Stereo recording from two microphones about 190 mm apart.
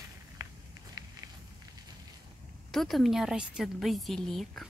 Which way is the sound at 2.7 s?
Centre (ahead or behind).